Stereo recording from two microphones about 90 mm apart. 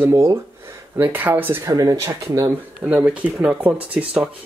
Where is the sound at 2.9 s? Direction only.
20° right (ahead or behind).